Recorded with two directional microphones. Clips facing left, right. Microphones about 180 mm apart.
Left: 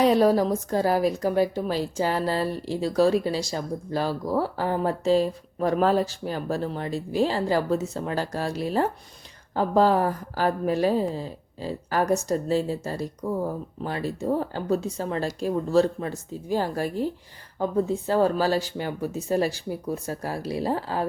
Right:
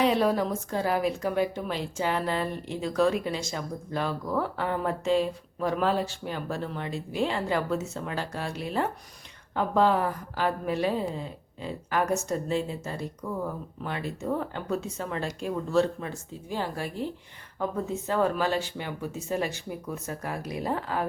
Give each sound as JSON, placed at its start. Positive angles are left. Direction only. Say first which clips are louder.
{"t": 0.0, "sound": "a woman's voice", "louder": "left 5 dB", "side_deg": 40}